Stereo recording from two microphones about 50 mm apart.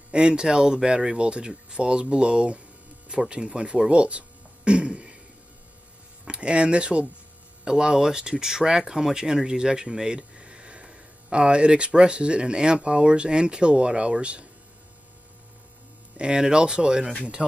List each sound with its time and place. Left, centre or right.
0.1 s speech: centre
4.6 s throat clearing: centre
6.2 s speech: right
16.2 s speech: centre